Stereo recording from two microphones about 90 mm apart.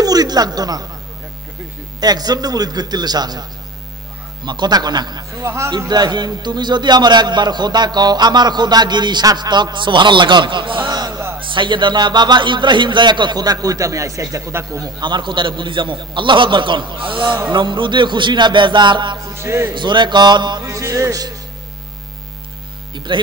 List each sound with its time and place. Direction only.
0.0 s speech: 45° right (ahead or behind)
2.0 s a man's voice: 45° right (ahead or behind)
4.5 s a man's voice: 50° right (ahead or behind)
5.4 s music: 35° right (ahead or behind)
5.9 s a man's voice: 50° right (ahead or behind); by 14.8 s 30° right (ahead or behind)
14.8 s a man's voice: 55° right (ahead or behind)
19.3 s music: 30° right (ahead or behind)
19.7 s a man's voice: 60° right (ahead or behind)
20.6 s music: 35° right (ahead or behind)